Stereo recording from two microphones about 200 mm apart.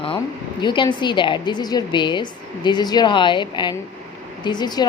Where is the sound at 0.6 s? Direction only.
25° left (ahead or behind).